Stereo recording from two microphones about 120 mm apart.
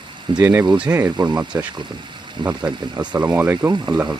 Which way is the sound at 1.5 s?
30° right (ahead or behind).